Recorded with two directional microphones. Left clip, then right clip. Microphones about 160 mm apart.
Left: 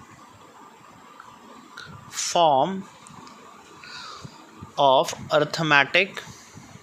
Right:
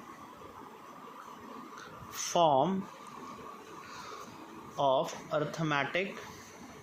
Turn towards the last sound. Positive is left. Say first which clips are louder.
# left 13 dB
turn(degrees=30)  # may be behind; listen again after turning